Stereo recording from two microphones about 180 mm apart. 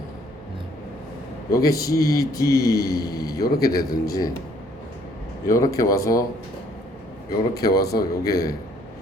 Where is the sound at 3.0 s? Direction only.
55° left (ahead or behind).